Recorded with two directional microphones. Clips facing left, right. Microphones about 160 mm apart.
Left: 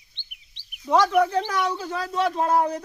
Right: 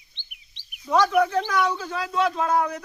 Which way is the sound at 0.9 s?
20° left (ahead or behind).